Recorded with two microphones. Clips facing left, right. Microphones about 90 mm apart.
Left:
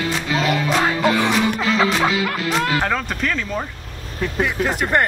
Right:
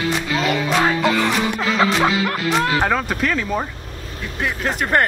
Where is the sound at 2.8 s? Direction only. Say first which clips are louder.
Right 2 dB; 10° right (ahead or behind).